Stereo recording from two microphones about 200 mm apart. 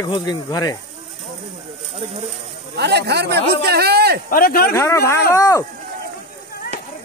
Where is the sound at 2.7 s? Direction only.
55° right (ahead or behind).